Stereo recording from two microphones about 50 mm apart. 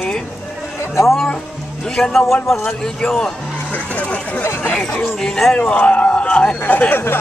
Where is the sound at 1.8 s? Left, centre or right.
Centre.